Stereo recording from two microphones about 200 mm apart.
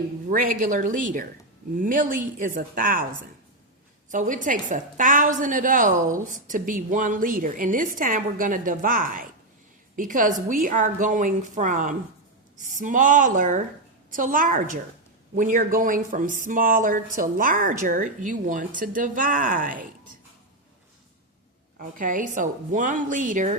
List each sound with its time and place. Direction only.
0.3 s a woman's voice: 40° right (ahead or behind)
4.1 s a woman's voice: 40° right (ahead or behind)
21.8 s a woman's voice: 40° right (ahead or behind)